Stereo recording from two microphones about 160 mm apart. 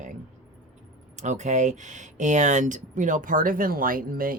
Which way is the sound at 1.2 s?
50° right (ahead or behind).